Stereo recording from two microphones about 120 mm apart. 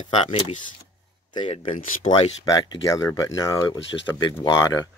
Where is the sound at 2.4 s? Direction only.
30° left (ahead or behind).